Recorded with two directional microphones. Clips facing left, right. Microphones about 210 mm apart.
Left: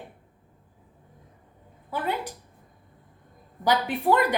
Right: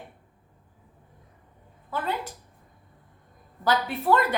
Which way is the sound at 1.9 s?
15° left (ahead or behind).